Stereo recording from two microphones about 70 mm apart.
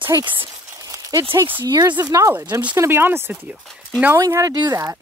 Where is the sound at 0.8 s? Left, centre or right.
Right.